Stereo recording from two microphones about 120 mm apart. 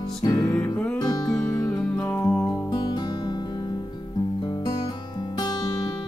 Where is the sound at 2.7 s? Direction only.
35° left (ahead or behind).